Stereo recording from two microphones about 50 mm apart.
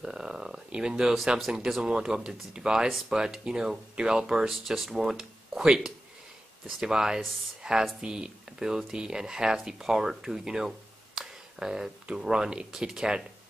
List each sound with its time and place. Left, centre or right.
0.0 s speech: centre